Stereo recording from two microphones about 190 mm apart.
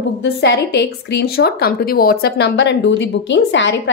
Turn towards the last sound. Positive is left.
turn(degrees=70)  # may be behind; listen again after turning